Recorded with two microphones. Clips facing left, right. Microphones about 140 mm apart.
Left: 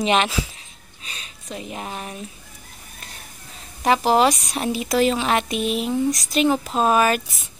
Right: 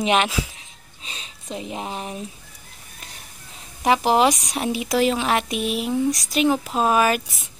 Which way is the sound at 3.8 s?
15° right (ahead or behind).